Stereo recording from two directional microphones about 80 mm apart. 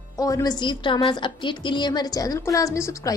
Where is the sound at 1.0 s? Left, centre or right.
Left.